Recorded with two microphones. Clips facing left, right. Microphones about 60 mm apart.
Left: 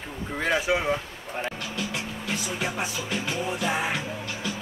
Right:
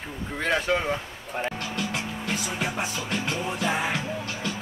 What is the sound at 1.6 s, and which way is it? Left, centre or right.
Music, right.